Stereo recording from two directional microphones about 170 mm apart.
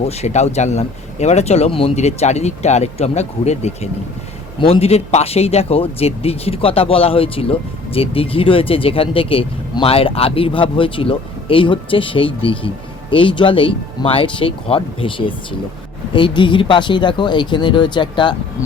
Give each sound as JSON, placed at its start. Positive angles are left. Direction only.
{"t": 0.0, "sound": "speech", "side_deg": 40}